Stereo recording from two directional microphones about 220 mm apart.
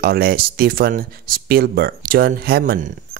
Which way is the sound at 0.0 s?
45° right (ahead or behind).